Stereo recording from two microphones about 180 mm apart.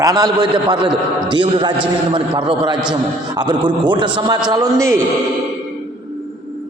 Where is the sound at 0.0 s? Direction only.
20° right (ahead or behind).